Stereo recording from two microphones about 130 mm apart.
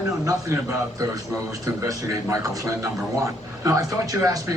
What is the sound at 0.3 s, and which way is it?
A man's voice, 25° right (ahead or behind).